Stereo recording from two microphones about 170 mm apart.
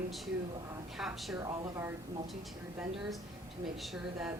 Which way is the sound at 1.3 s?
20° right (ahead or behind).